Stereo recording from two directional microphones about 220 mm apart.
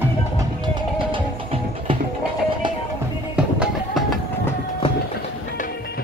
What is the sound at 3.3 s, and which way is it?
Music, centre (ahead or behind).